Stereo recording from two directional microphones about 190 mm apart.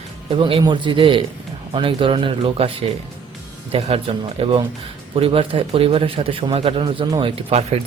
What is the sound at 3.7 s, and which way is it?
A man's voice, 30° right (ahead or behind).